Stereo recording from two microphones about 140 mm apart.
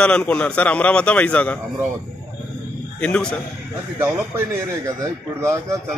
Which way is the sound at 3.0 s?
10° left (ahead or behind).